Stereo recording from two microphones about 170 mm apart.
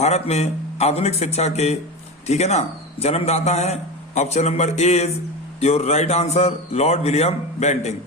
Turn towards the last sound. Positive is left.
turn(degrees=40)  # may be behind; listen again after turning